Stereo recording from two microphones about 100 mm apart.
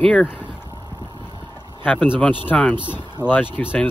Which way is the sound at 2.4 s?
15° left (ahead or behind).